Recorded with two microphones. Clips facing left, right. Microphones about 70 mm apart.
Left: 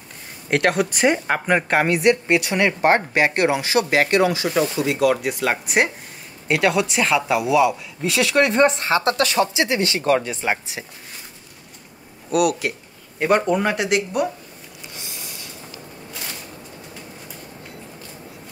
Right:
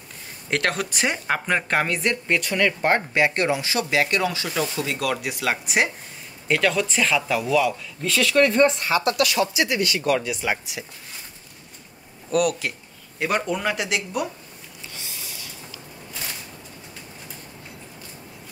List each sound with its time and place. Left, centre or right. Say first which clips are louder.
0.5 s a woman's voice: left 5 dB; centre
2.8 s speech: left 5 dB; left
4.7 s speech: left 7 dB; centre
6.4 s speech: left 3 dB; centre; by 10.9 s left
12.3 s speech: left 3 dB; centre
13.8 s speech: left 5 dB; left
15.2 s snort: left 2 dB; left